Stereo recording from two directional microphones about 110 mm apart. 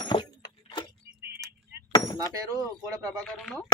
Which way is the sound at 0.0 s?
45° left (ahead or behind).